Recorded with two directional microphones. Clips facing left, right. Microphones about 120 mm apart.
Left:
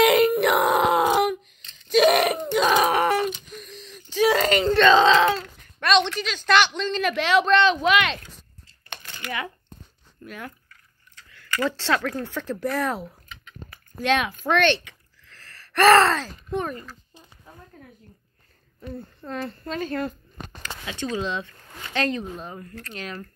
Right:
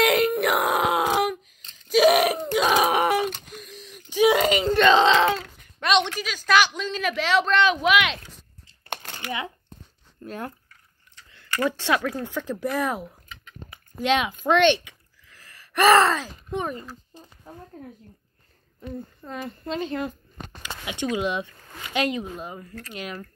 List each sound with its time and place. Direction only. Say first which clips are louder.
0.0 s a sound: left 3 dB; centre (ahead or behind)
1.9 s groan: even; 5° right (ahead or behind)
3.5 s whimper: left 1 dB; 10° right (ahead or behind)
4.8 s wail: left 1 dB; 20° right (ahead or behind)
5.8 s a sound: left 1 dB; 15° right (ahead or behind)
6.1 s a woman's voice: left 1 dB; 5° right (ahead or behind)
9.2 s speech: left 1 dB; 20° right (ahead or behind)
10.2 s speech: right 4 dB; 35° right (ahead or behind)
11.1 s speech: even; 20° right (ahead or behind)
18.8 s speech: right 1 dB; 15° right (ahead or behind)